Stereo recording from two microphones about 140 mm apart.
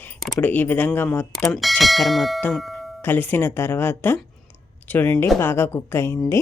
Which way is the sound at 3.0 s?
15° left (ahead or behind).